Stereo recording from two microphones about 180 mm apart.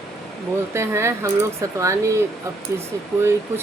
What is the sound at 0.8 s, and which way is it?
Speech, 15° right (ahead or behind).